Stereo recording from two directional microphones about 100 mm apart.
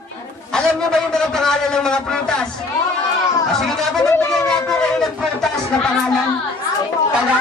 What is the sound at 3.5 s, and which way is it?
A man's voice, 5° left (ahead or behind).